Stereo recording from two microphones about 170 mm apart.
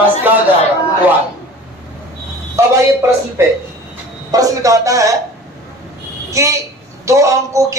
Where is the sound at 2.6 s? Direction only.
15° right (ahead or behind).